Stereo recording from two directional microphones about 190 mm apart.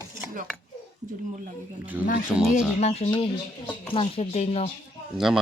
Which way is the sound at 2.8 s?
35° left (ahead or behind).